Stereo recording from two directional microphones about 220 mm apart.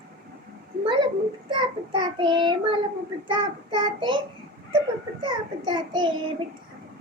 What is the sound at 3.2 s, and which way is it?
Speech, 20° right (ahead or behind).